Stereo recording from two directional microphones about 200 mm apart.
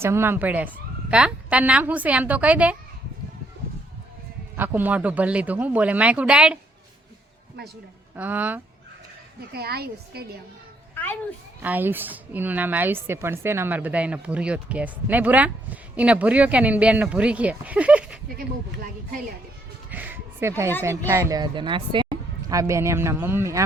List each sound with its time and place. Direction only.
0.0 s a woman's voice: 10° right (ahead or behind)
4.5 s a woman's voice: 10° right (ahead or behind)
8.1 s a woman's voice: 10° right (ahead or behind)
9.5 s a woman's voice: 50° right (ahead or behind)
10.9 s children playing: 10° left (ahead or behind)
11.6 s a woman's voice: 10° right (ahead or behind)
19.9 s music: 10° right (ahead or behind)
21.1 s a woman's voice: 15° right (ahead or behind)